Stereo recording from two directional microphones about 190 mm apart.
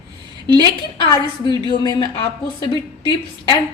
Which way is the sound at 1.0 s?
25° left (ahead or behind).